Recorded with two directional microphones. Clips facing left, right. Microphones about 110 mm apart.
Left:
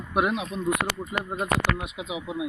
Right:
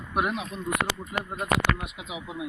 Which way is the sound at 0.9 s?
20° right (ahead or behind).